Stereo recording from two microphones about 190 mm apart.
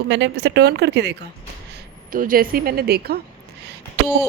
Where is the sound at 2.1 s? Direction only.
45° right (ahead or behind).